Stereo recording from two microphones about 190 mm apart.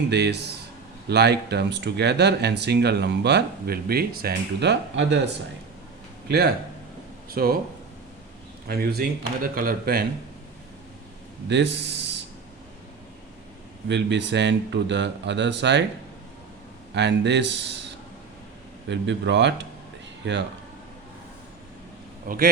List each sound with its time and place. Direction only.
0.1 s speech: 65° right (ahead or behind)
7.3 s speech: 50° right (ahead or behind)
8.6 s speech: 55° right (ahead or behind)
11.4 s speech: 65° right (ahead or behind)
13.8 s speech: 70° right (ahead or behind)
16.9 s speech: 65° right (ahead or behind)